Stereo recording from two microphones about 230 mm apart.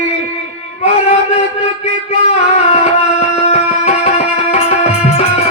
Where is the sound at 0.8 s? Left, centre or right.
Left.